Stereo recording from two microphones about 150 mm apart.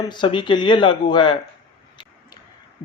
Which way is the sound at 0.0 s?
30° left (ahead or behind).